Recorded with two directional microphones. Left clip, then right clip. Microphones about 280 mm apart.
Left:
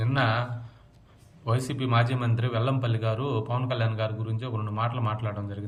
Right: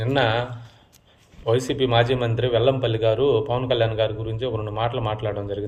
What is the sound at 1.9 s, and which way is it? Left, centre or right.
Speech, centre.